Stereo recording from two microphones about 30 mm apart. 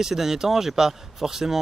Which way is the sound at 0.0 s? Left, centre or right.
Centre.